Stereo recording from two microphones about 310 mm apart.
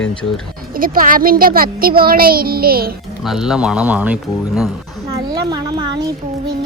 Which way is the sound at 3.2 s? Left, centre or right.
Centre.